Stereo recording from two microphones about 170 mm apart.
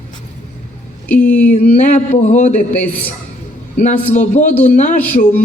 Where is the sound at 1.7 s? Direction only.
40° left (ahead or behind).